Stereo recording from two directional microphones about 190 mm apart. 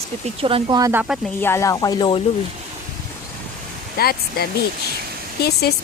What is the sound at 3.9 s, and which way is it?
Speech, 55° left (ahead or behind).